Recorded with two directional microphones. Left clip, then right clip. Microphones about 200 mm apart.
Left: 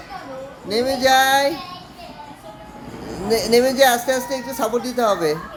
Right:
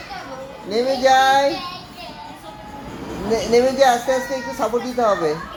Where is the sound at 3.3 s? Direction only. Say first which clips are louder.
Even; 30° left (ahead or behind).